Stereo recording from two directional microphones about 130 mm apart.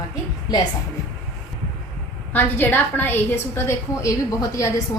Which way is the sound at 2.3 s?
15° left (ahead or behind).